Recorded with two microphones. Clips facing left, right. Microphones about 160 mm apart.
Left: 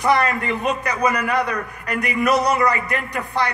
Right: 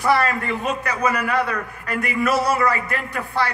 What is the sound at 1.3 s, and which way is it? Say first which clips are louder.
A man's voice: left 1 dB; 15° left (ahead or behind).